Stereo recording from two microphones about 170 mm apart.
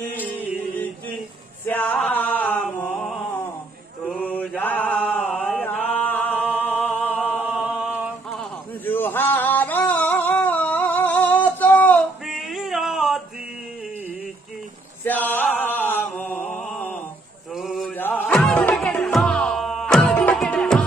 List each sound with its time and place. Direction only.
1.7 s chant: 10° left (ahead or behind)
7.5 s a sound: 5° right (ahead or behind)
8.8 s a sound: 10° left (ahead or behind)
12.3 s male singing: centre (ahead or behind)
15.0 s chant: 10° left (ahead or behind)
17.6 s mantra: centre (ahead or behind)
17.9 s music: 10° left (ahead or behind)